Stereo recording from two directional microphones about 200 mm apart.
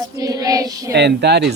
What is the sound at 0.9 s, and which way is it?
Speech, 55° right (ahead or behind).